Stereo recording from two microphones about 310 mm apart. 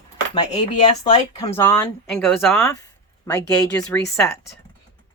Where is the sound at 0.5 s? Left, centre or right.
Left.